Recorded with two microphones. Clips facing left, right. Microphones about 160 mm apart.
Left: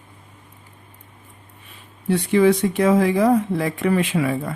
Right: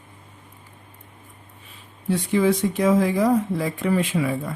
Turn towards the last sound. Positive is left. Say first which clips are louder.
# left 2 dB
turn(degrees=65)  # may be behind; listen again after turning